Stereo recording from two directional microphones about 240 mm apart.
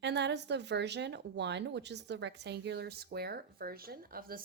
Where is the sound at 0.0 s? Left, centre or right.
Right.